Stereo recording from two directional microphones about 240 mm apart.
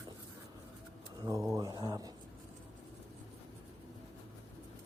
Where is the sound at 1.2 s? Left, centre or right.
Centre.